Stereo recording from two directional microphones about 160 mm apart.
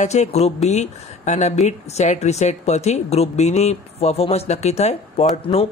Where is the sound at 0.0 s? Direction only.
45° left (ahead or behind).